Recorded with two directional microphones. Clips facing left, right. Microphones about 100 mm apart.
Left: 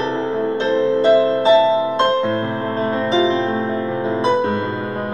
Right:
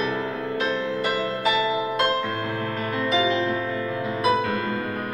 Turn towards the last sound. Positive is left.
turn(degrees=30)  # may be behind; listen again after turning